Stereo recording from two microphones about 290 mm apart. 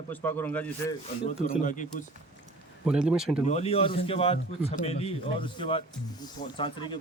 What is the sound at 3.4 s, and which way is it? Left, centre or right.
Speech, left.